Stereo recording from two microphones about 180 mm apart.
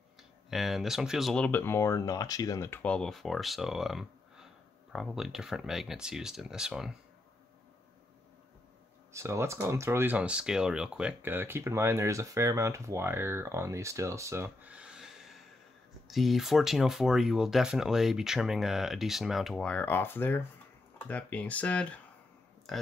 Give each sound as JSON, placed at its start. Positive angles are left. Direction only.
{"t": 0.5, "sound": "speech", "side_deg": 0}
{"t": 9.1, "sound": "speech", "side_deg": -15}